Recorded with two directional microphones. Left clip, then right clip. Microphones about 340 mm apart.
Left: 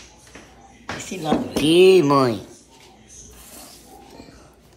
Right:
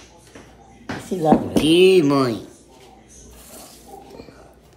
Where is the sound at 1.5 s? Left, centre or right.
Centre.